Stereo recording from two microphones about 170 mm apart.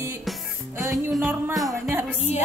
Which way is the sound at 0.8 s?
20° right (ahead or behind).